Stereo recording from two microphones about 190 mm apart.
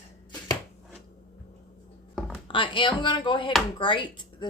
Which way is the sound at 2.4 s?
25° left (ahead or behind).